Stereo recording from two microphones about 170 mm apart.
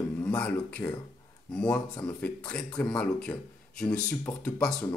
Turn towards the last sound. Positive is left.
turn(degrees=5)  # may be behind; listen again after turning